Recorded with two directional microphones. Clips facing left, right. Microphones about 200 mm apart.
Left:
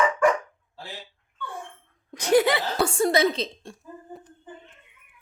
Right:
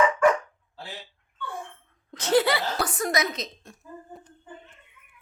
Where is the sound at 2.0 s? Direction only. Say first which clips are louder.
Left 2 dB; 15° left (ahead or behind); by 3.8 s 30° left (ahead or behind).